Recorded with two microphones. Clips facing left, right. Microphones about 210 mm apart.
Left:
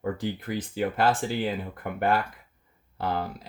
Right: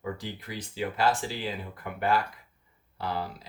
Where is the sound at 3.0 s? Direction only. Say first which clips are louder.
Left 4 dB; 50° left (ahead or behind).